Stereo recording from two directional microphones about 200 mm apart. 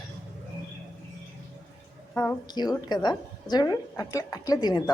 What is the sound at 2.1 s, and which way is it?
A woman's voice, 15° left (ahead or behind).